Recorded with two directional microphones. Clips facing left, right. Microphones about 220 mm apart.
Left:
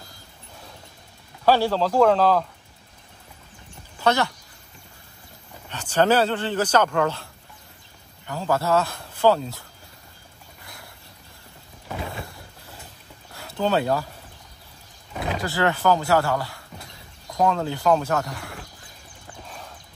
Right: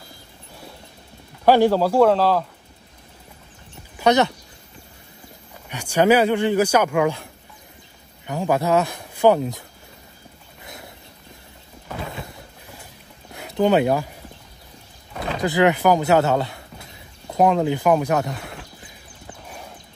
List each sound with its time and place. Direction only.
1.4 s speech: 15° right (ahead or behind)
4.0 s speech: 20° right (ahead or behind)
5.7 s speech: 10° right (ahead or behind)
8.3 s speech: 15° right (ahead or behind)
10.6 s a sound: 20° right (ahead or behind)
13.3 s a sound: 20° right (ahead or behind)
15.4 s speech: 15° right (ahead or behind)